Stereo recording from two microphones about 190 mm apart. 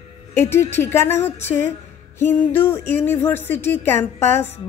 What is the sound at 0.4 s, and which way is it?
Music, 10° left (ahead or behind).